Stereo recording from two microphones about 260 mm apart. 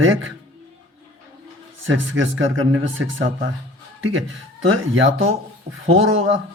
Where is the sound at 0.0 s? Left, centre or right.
Right.